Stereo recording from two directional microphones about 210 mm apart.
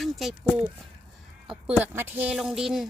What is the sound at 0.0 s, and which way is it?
A woman's voice, centre (ahead or behind).